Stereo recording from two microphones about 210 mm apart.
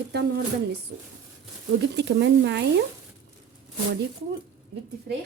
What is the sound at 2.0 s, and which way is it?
Speech, 55° right (ahead or behind).